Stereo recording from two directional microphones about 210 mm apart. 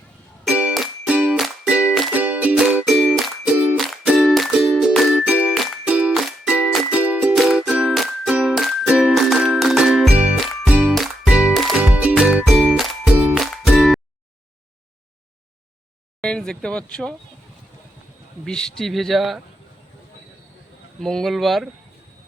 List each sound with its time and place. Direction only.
0.4 s music: 5° right (ahead or behind)
16.2 s speech: 5° left (ahead or behind)
18.4 s speech: 5° left (ahead or behind)
21.0 s speech: centre (ahead or behind)